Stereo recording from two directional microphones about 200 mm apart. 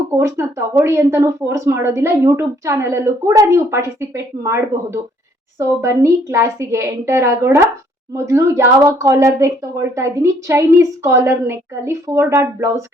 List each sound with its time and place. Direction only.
0.2 s a woman's voice: 15° right (ahead or behind)